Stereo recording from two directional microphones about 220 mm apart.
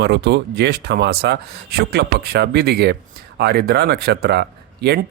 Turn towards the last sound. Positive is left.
turn(degrees=-50)  # may be behind; listen again after turning